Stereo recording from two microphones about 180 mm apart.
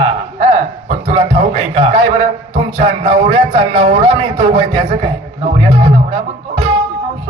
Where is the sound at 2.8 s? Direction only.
35° right (ahead or behind).